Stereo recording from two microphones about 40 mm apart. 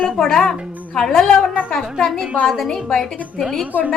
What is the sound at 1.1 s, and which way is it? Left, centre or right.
A woman's voice, centre.